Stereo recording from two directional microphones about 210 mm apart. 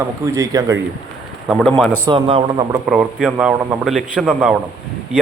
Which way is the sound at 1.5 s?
Centre (ahead or behind).